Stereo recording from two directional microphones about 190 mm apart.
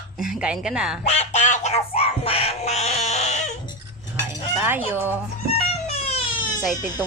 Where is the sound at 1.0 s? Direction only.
35° left (ahead or behind).